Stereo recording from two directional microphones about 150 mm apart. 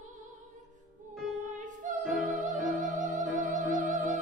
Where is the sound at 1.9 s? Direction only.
55° right (ahead or behind).